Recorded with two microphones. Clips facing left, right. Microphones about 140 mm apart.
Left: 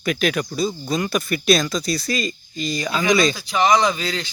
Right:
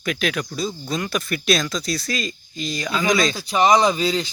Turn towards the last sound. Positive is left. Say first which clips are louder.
# right 4 dB
turn(degrees=-10)  # may be behind; listen again after turning